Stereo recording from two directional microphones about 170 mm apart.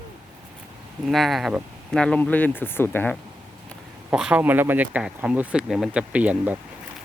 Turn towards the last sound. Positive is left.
turn(degrees=-10)  # may be behind; listen again after turning